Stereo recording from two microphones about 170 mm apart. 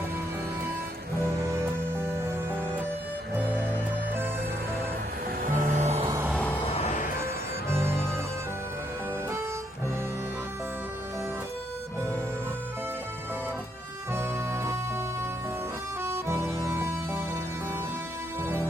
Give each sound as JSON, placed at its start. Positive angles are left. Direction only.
{"t": 1.2, "sound": "music", "side_deg": -15}
{"t": 5.4, "sound": "music", "side_deg": -55}
{"t": 6.1, "sound": "music", "side_deg": -15}
{"t": 6.3, "sound": "music", "side_deg": 10}
{"t": 6.7, "sound": "music", "side_deg": 45}
{"t": 7.7, "sound": "music", "side_deg": -15}
{"t": 14.1, "sound": "music", "side_deg": -15}